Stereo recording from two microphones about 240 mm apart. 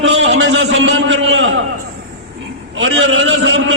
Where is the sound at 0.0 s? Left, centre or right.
Right.